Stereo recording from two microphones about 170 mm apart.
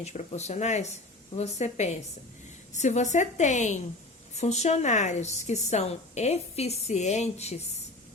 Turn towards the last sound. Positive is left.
turn(degrees=40)  # may be behind; listen again after turning